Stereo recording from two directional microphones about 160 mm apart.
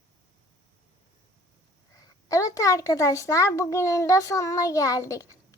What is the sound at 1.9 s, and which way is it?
A woman's voice, 20° left (ahead or behind).